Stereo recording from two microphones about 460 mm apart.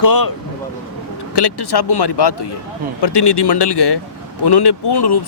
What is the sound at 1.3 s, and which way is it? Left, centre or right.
Speech, left.